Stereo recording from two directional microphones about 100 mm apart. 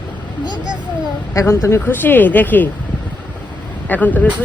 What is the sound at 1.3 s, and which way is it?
Speech, 30° left (ahead or behind).